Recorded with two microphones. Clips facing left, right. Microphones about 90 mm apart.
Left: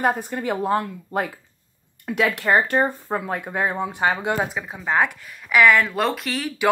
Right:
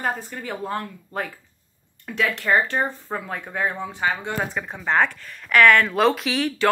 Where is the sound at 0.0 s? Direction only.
15° left (ahead or behind); by 6.5 s centre (ahead or behind).